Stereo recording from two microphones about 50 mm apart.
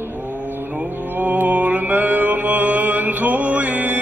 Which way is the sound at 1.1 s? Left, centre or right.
Right.